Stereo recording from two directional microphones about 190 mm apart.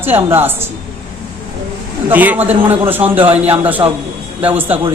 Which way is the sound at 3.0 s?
30° right (ahead or behind).